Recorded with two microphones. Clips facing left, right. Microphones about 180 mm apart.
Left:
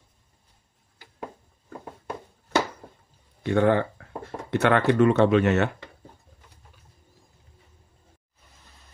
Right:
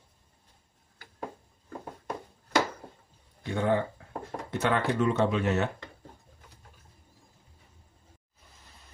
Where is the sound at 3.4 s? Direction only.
70° left (ahead or behind).